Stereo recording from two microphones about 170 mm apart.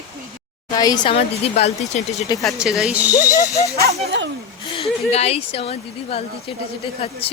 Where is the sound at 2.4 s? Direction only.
Centre (ahead or behind).